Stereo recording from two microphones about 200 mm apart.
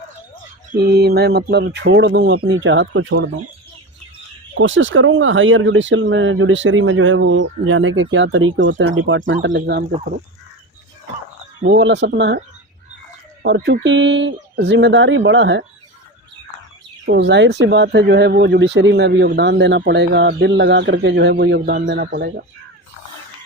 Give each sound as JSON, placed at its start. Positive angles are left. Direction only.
{"t": 0.8, "sound": "speech", "side_deg": -55}
{"t": 4.6, "sound": "speech", "side_deg": -70}
{"t": 9.3, "sound": "speech", "side_deg": -55}
{"t": 11.8, "sound": "speech", "side_deg": -65}
{"t": 13.4, "sound": "speech", "side_deg": -60}
{"t": 17.1, "sound": "speech", "side_deg": -60}